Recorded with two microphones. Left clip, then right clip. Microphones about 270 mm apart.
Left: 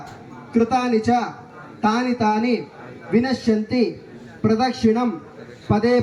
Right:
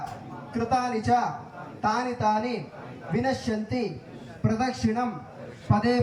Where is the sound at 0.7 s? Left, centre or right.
Left.